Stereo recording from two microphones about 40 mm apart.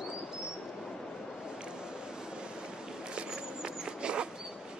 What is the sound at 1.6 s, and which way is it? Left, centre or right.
Vehicle, right.